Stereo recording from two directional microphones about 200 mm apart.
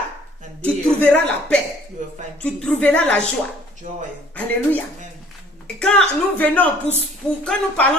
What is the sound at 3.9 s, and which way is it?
Speech, 40° right (ahead or behind).